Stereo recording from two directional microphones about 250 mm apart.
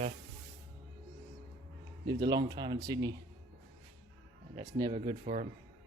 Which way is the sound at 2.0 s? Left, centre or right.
Centre.